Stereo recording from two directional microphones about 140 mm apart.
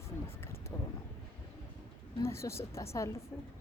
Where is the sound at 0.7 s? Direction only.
15° left (ahead or behind).